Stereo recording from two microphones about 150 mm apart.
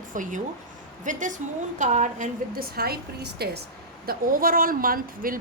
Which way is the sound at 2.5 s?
85° right.